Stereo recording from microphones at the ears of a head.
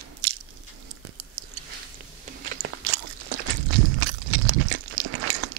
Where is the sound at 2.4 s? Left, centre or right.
Right.